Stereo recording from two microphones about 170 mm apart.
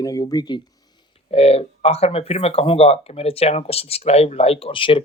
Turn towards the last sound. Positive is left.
turn(degrees=30)  # may be behind; listen again after turning